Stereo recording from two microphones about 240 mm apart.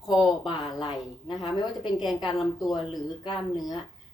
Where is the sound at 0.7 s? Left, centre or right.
Left.